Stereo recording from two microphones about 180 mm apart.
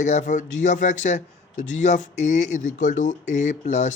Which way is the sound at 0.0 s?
40° left (ahead or behind).